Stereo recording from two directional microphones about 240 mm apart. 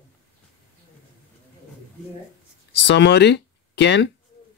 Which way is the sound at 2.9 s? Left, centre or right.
Left.